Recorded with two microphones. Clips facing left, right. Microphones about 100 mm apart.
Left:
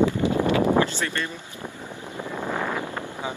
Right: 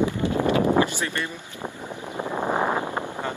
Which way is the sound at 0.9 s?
15° right (ahead or behind).